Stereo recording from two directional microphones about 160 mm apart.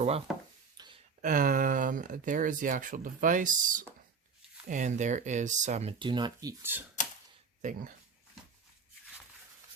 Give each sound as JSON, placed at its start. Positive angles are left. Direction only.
{"t": 0.3, "sound": "chopping", "side_deg": -5}
{"t": 0.8, "sound": "a sound", "side_deg": -25}
{"t": 1.2, "sound": "speech", "side_deg": -60}
{"t": 6.0, "sound": "speech", "side_deg": -30}
{"t": 7.6, "sound": "speech", "side_deg": -50}